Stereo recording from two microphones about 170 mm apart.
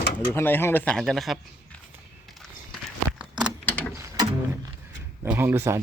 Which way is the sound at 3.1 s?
5° right (ahead or behind).